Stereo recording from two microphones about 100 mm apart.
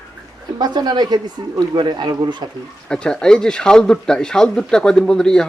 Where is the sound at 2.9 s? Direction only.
10° left (ahead or behind).